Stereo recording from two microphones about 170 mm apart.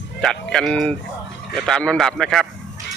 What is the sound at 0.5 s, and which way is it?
A man's voice, 5° left (ahead or behind).